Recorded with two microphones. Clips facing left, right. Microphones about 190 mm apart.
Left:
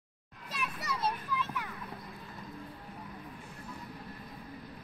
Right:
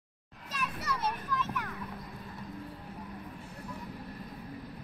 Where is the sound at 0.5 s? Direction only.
10° left (ahead or behind).